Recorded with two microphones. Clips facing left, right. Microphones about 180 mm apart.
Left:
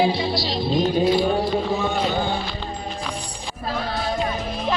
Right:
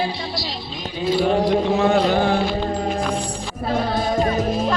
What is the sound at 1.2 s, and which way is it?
Music, 85° right.